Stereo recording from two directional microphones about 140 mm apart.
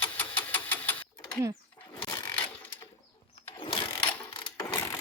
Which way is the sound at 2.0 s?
30° left (ahead or behind).